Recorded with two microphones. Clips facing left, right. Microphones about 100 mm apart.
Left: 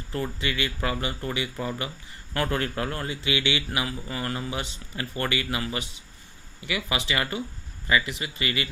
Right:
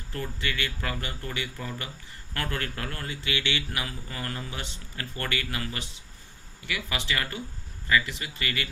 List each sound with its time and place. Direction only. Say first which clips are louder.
0.1 s speech: left 3 dB; 20° left (ahead or behind)